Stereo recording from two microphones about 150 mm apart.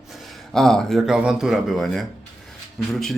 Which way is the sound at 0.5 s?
Centre (ahead or behind).